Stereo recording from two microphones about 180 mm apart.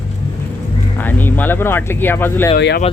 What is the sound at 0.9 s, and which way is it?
Speech, 10° left (ahead or behind).